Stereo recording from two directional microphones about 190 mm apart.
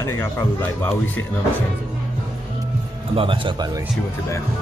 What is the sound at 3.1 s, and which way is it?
Speech, 25° right (ahead or behind).